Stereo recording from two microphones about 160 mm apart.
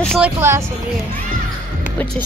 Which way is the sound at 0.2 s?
15° right (ahead or behind).